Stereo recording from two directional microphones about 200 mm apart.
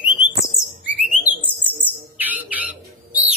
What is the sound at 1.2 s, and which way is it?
Bird, 10° right (ahead or behind).